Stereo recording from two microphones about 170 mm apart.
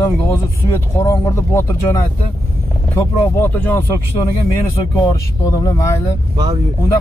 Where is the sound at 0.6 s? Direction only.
15° left (ahead or behind).